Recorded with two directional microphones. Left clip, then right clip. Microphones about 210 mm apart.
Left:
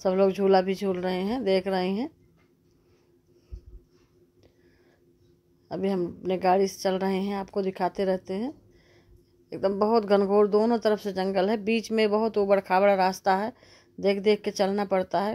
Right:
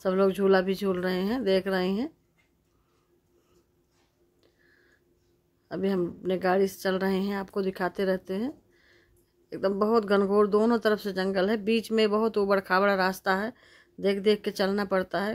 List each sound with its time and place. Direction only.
0.0 s speech: centre (ahead or behind)
5.7 s speech: centre (ahead or behind)
8.3 s a sound: centre (ahead or behind)
9.5 s speech: centre (ahead or behind)